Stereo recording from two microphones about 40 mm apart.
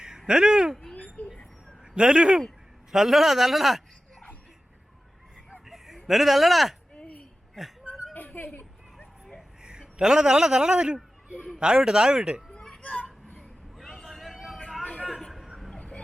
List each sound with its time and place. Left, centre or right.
0.3 s speech: centre
1.2 s mouse: left
2.0 s speech: right
2.9 s a man's voice: centre
5.6 s a sound: centre
6.1 s speech: centre
6.9 s a sound: left
7.6 s a man's voice: centre
8.1 s a sound: left
9.6 s a man's voice: centre
12.8 s children playing: left
13.7 s vehicle: centre
15.7 s vehicle: centre